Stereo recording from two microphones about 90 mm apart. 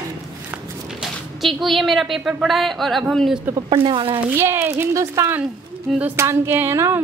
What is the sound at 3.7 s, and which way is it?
Speech, 80° right.